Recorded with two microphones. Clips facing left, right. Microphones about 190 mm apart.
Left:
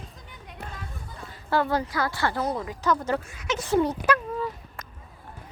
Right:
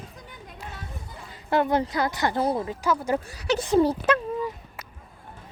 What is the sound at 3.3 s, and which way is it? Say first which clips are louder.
Speech: right 5 dB; 35° right (ahead or behind).